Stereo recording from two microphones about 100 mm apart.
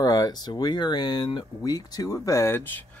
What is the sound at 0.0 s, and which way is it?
Speech, 40° left (ahead or behind).